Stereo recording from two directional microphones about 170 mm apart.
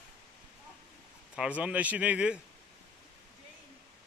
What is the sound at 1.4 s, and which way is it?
A man's voice, 5° right (ahead or behind).